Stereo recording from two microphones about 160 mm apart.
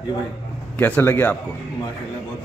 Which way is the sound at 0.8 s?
15° left (ahead or behind).